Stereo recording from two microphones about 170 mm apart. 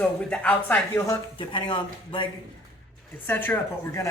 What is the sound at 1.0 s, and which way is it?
Speech, 30° left (ahead or behind).